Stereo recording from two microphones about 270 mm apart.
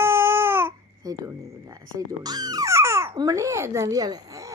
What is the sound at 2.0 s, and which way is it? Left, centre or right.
A woman's voice, centre.